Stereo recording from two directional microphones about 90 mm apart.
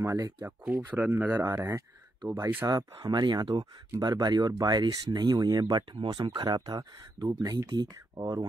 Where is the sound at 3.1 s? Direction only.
50° right (ahead or behind).